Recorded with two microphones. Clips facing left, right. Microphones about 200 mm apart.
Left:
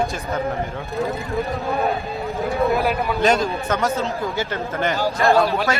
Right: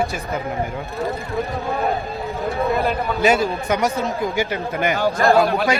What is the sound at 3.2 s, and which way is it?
A man's voice, 5° right (ahead or behind).